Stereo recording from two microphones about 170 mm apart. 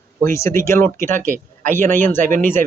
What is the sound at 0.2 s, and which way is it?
Speech, 15° left (ahead or behind).